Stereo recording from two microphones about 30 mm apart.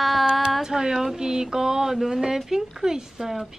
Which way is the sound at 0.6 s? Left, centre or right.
Centre.